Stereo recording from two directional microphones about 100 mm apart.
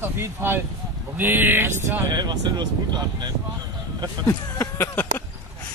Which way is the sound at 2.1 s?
45° right (ahead or behind).